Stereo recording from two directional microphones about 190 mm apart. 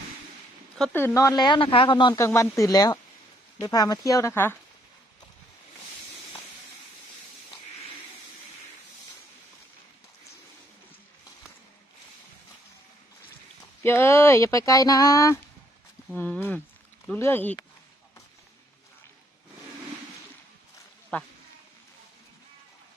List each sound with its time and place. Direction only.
0.8 s speech: 10° left (ahead or behind)
2.1 s speech: 15° left (ahead or behind)
13.8 s speech: 15° left (ahead or behind)
21.1 s speech: 10° left (ahead or behind)